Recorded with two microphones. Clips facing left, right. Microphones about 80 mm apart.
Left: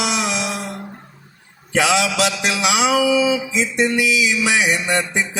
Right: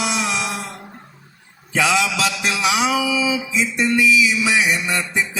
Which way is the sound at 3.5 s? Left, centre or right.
Left.